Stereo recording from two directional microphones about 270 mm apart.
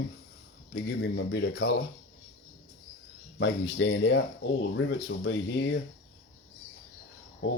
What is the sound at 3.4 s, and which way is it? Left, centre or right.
Speech, left.